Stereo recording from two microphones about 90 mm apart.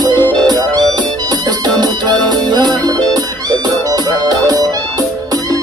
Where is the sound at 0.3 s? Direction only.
50° right (ahead or behind).